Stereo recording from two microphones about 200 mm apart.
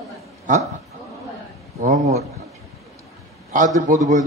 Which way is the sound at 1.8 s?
35° right (ahead or behind).